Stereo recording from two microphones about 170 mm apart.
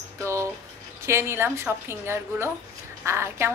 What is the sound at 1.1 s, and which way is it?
A woman's voice, 15° right (ahead or behind).